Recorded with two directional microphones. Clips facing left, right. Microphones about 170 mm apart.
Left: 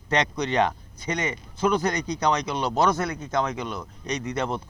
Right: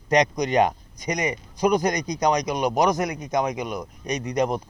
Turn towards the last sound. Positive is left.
turn(degrees=-15)  # may be behind; listen again after turning